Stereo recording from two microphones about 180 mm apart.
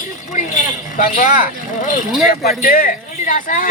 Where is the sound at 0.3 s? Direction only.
45° left (ahead or behind).